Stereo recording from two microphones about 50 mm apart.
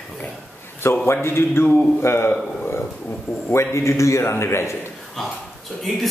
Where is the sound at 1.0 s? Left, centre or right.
Left.